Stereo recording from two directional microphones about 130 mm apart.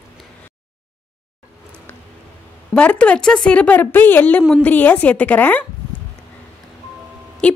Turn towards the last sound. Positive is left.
turn(degrees=10)  # may be behind; listen again after turning